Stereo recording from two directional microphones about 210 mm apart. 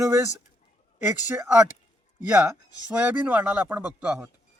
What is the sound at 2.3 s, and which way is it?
Speech, 5° right (ahead or behind).